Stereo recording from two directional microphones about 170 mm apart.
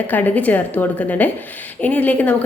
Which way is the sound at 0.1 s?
10° left (ahead or behind).